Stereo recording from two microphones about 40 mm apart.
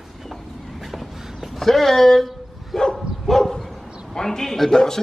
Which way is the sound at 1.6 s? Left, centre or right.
Centre.